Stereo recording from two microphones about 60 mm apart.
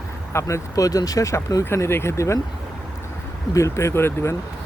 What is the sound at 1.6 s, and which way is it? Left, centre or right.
Speech, left.